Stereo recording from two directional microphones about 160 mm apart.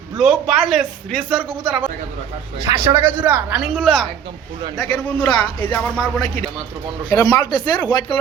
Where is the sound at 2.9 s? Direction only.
10° right (ahead or behind); by 6.0 s 10° left (ahead or behind).